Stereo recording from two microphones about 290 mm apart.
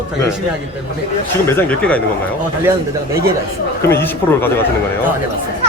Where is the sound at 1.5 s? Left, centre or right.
Centre.